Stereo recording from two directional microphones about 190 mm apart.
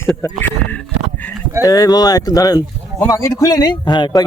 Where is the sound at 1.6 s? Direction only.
20° left (ahead or behind).